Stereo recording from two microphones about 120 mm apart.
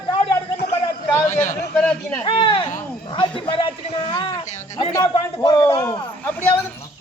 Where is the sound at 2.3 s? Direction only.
45° left (ahead or behind).